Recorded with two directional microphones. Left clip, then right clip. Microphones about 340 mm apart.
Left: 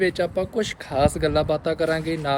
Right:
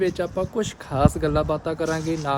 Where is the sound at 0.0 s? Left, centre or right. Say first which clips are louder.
Left 2 dB; centre.